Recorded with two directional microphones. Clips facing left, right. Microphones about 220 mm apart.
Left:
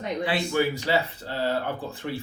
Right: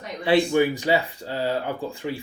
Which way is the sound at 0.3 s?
20° right (ahead or behind).